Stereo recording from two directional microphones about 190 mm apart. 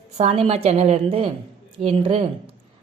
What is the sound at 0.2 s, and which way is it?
A woman's voice, 30° right (ahead or behind).